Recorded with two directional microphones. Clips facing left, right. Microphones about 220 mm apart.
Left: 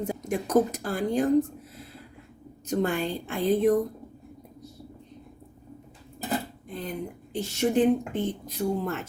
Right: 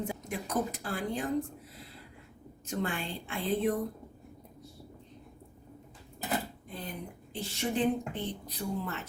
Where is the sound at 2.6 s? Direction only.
40° left (ahead or behind).